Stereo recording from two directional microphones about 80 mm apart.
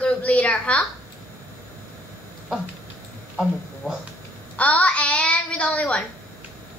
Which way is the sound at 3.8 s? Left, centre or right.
Centre.